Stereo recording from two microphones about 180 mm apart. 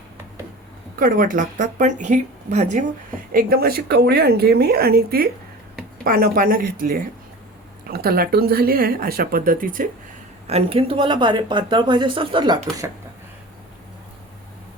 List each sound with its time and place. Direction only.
0.9 s speech: 50° right (ahead or behind)
3.3 s speech: 55° right (ahead or behind)
10.4 s speech: 35° right (ahead or behind)